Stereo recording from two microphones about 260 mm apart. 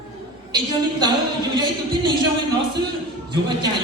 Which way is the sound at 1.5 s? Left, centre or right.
Centre.